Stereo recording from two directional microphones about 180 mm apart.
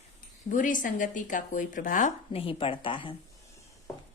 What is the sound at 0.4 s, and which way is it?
Speech, 45° left (ahead or behind).